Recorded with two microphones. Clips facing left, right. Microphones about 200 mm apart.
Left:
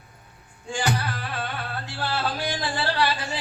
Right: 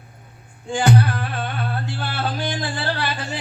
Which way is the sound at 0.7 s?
55° right (ahead or behind).